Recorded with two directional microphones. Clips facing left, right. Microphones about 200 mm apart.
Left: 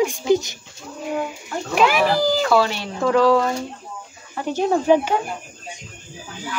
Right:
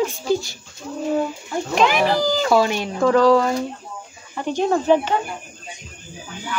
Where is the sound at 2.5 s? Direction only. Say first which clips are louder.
Right 1 dB; 15° right (ahead or behind).